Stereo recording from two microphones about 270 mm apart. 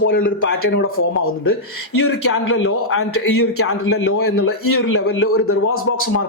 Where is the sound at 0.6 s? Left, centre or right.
Left.